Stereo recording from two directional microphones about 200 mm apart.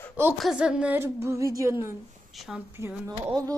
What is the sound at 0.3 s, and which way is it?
Speech, centre (ahead or behind).